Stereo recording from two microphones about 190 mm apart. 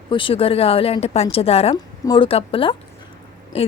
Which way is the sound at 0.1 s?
25° left (ahead or behind).